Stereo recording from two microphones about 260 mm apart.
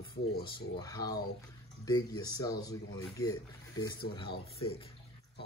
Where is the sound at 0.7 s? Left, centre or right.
Centre.